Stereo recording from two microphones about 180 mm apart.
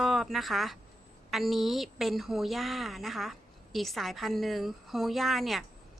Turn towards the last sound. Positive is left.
turn(degrees=0)  # may be behind; listen again after turning